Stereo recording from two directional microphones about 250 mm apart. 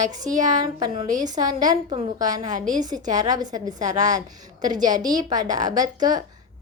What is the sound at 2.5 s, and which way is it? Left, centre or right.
Speech, right.